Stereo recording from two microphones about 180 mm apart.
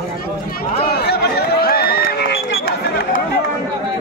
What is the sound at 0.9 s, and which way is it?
Run, 60° left (ahead or behind).